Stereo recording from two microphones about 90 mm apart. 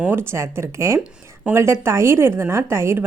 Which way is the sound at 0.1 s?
25° right (ahead or behind).